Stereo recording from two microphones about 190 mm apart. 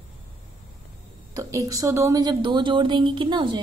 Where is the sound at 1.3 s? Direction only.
15° right (ahead or behind).